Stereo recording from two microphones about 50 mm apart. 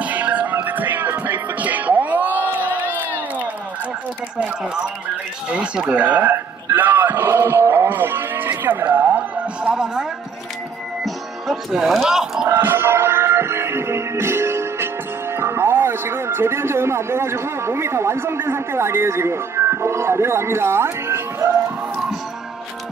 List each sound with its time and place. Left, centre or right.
0.0 s music: right
5.9 s speech: right
6.3 s a sound: right
7.9 s music: right
8.5 s speech: right
9.7 s speech: centre
11.1 s speech: centre
12.4 s music: right
15.3 s speech: right